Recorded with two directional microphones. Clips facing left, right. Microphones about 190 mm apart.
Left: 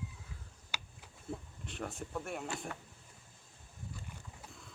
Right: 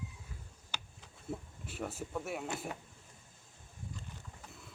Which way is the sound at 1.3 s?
5° right (ahead or behind).